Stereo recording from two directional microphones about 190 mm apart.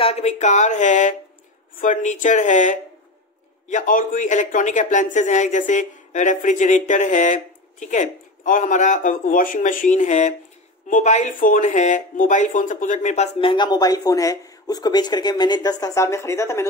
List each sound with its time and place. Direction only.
0.0 s a woman's voice: 35° left (ahead or behind); by 16.6 s 15° left (ahead or behind)